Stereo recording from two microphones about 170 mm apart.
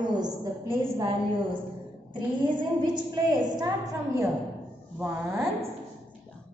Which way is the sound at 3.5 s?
20° right (ahead or behind).